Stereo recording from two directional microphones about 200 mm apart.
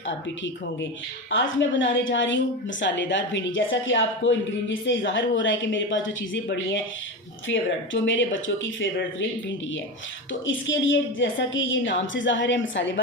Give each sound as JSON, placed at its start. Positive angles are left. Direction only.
{"t": 0.1, "sound": "speech", "side_deg": 70}
{"t": 10.4, "sound": "speech", "side_deg": 70}